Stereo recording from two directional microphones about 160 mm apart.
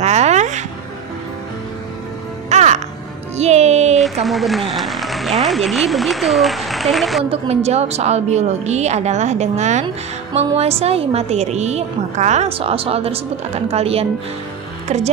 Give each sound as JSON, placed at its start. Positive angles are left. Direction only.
{"t": 0.0, "sound": "a sound", "side_deg": -45}
{"t": 2.5, "sound": "music", "side_deg": -45}
{"t": 4.0, "sound": "speech", "side_deg": 0}
{"t": 7.2, "sound": "a woman's voice", "side_deg": -40}